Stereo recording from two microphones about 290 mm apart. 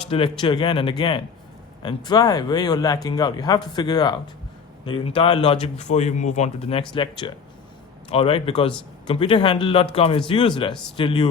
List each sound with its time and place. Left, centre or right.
0.0 s speech: centre